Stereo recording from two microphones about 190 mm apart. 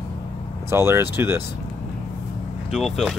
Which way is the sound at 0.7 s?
15° right (ahead or behind).